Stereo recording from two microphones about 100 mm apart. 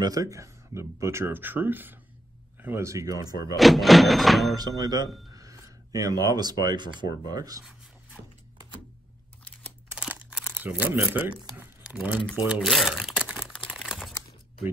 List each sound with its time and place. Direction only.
0.0 s speech: 35° right (ahead or behind)
3.5 s speech: centre (ahead or behind)
4.6 s speech: 40° right (ahead or behind)
9.4 s camera: 15° left (ahead or behind)
9.9 s crumpling: 10° right (ahead or behind)
11.5 s a sound: 10° right (ahead or behind)
12.6 s a sound: centre (ahead or behind)
13.5 s crumpling: 10° left (ahead or behind)